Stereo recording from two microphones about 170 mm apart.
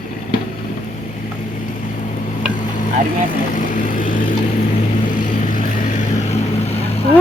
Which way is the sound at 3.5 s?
50° left (ahead or behind).